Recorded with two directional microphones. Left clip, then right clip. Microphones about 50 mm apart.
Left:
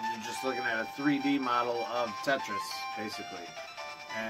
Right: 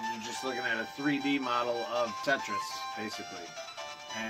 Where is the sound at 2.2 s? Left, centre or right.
Left.